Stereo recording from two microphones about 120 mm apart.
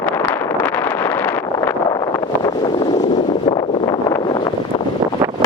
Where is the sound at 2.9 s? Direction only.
75° left (ahead or behind).